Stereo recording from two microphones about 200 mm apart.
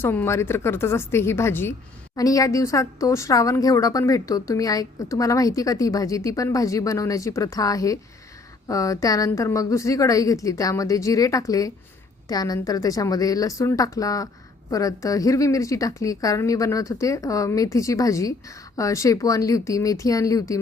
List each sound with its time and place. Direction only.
0.0 s a woman's voice: 10° left (ahead or behind)